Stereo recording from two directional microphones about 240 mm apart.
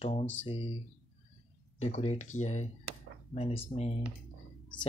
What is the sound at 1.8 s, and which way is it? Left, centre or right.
Speech, left.